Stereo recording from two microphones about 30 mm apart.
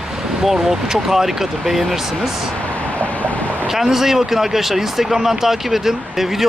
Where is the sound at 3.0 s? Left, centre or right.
Left.